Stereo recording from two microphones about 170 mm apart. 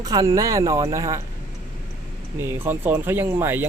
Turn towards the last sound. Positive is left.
turn(degrees=-15)  # may be behind; listen again after turning